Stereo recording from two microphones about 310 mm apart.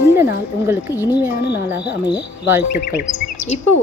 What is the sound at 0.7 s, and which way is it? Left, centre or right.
Speech, centre.